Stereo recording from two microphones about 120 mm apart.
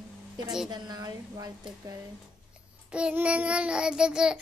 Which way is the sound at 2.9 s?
10° right (ahead or behind).